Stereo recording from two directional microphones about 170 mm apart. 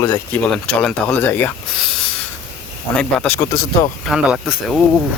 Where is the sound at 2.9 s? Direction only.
5° left (ahead or behind).